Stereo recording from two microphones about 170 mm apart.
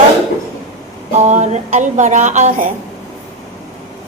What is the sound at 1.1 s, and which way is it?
A woman's voice, 40° right (ahead or behind).